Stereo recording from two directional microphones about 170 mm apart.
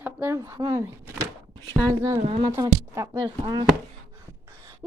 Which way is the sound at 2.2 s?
35° right (ahead or behind).